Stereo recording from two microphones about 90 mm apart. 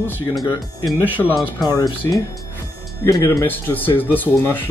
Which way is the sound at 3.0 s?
40° left (ahead or behind).